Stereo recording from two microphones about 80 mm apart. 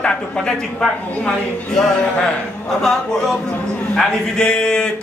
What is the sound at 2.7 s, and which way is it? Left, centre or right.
A man's voice, centre.